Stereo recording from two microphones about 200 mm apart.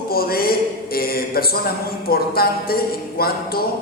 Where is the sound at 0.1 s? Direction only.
50° left (ahead or behind).